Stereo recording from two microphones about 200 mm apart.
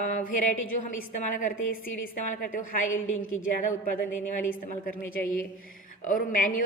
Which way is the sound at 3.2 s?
80° left.